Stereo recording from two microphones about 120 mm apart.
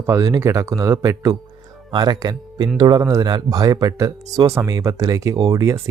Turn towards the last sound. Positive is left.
turn(degrees=-25)  # may be behind; listen again after turning